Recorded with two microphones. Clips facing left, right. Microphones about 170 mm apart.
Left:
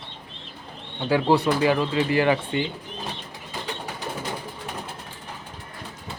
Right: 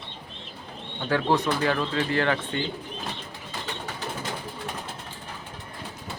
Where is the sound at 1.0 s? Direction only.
10° left (ahead or behind).